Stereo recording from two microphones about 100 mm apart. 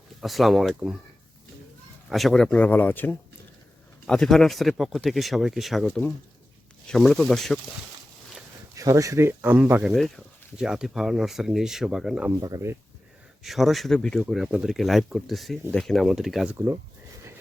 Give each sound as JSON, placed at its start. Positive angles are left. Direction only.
{"t": 0.2, "sound": "speech", "side_deg": 0}
{"t": 2.0, "sound": "speech", "side_deg": 0}
{"t": 4.0, "sound": "speech", "side_deg": 5}
{"t": 5.9, "sound": "speech", "side_deg": 15}
{"t": 6.8, "sound": "speech", "side_deg": 5}
{"t": 8.7, "sound": "speech", "side_deg": -35}
{"t": 9.8, "sound": "speech", "side_deg": 0}
{"t": 12.4, "sound": "speech", "side_deg": -35}
{"t": 13.4, "sound": "speech", "side_deg": 0}